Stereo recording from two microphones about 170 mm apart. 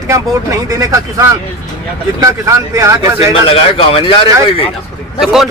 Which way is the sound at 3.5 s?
35° left (ahead or behind).